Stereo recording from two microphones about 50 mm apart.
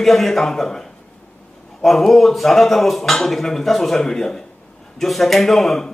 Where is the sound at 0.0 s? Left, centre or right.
Centre.